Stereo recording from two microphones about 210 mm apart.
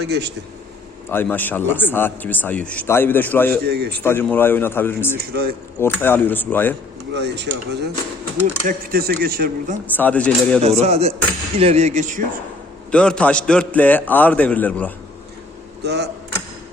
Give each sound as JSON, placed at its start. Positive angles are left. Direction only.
{"t": 0.0, "sound": "speech", "side_deg": -50}
{"t": 1.1, "sound": "speech", "side_deg": 10}
{"t": 3.6, "sound": "speech", "side_deg": -50}
{"t": 4.0, "sound": "speech", "side_deg": 10}
{"t": 5.1, "sound": "speech", "side_deg": -50}
{"t": 5.8, "sound": "speech", "side_deg": 10}
{"t": 7.1, "sound": "speech", "side_deg": -55}
{"t": 9.8, "sound": "speech", "side_deg": 5}
{"t": 10.6, "sound": "a man's voice", "side_deg": -30}
{"t": 12.9, "sound": "speech", "side_deg": 5}
{"t": 15.8, "sound": "speech", "side_deg": -50}